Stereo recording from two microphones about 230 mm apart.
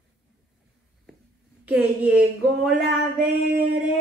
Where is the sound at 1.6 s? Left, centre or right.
Centre.